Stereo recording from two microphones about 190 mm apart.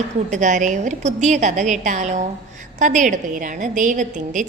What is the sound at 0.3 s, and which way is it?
A woman's voice, 40° right (ahead or behind).